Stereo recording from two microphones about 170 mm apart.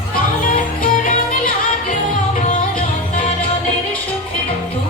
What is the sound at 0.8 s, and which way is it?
Music, 55° left (ahead or behind).